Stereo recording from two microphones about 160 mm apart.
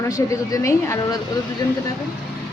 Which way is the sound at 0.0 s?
20° left (ahead or behind).